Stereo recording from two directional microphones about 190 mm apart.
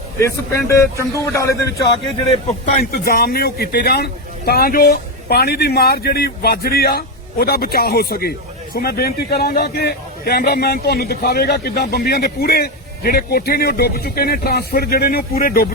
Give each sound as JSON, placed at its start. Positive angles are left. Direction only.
{"t": 0.2, "sound": "a man's voice", "side_deg": 15}
{"t": 2.2, "sound": "a man's voice", "side_deg": 35}
{"t": 2.9, "sound": "a man's voice", "side_deg": 50}